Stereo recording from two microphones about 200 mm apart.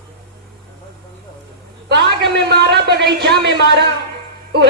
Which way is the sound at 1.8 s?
60° right (ahead or behind).